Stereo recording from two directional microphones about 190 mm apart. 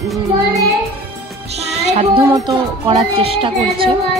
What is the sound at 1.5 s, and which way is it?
Music, 35° right (ahead or behind).